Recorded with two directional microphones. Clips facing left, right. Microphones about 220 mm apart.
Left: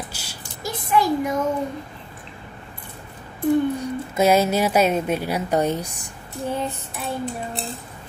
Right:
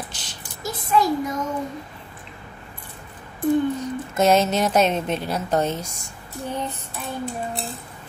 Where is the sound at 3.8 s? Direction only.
10° left (ahead or behind).